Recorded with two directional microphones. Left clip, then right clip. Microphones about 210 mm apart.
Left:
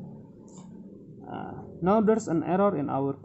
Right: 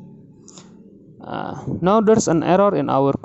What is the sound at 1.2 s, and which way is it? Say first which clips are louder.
Speech: right 11 dB; 45° right (ahead or behind).